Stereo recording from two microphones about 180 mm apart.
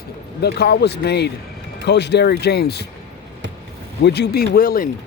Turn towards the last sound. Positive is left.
turn(degrees=55)  # may be behind; listen again after turning